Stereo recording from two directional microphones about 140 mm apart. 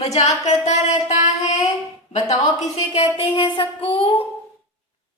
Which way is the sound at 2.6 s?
50° left (ahead or behind).